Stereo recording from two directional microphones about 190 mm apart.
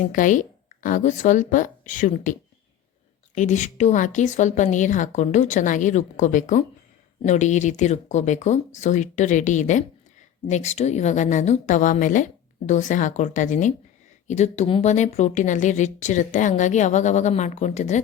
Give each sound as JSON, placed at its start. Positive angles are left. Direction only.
{"t": 0.0, "sound": "a woman's voice", "side_deg": 45}
{"t": 3.3, "sound": "speech", "side_deg": 40}